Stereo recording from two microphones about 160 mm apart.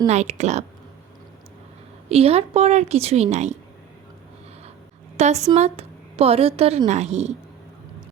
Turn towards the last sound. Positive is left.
turn(degrees=-45)  # may be behind; listen again after turning